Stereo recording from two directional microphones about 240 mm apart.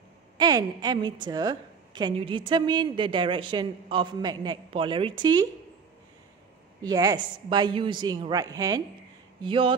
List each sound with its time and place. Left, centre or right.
0.4 s a woman's voice: centre
6.8 s a woman's voice: centre